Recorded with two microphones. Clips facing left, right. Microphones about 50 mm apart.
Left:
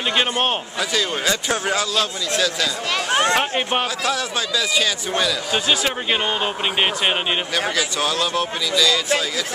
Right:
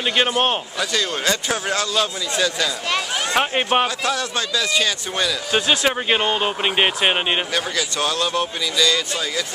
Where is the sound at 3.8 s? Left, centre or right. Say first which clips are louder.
Even; centre.